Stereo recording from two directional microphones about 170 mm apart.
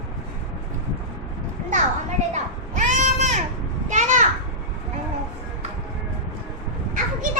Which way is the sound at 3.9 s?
45° right (ahead or behind).